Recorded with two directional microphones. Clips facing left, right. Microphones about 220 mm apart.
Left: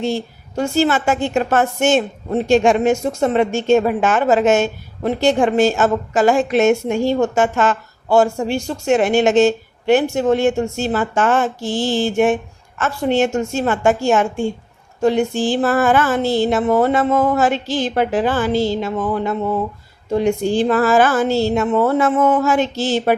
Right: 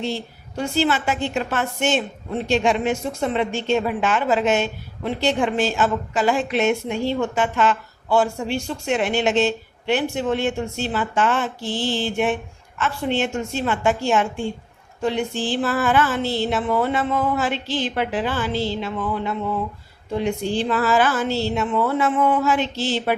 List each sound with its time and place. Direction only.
0.0 s a woman's voice: 45° left (ahead or behind)